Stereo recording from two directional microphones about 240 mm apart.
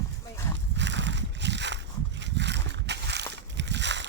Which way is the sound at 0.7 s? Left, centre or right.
Right.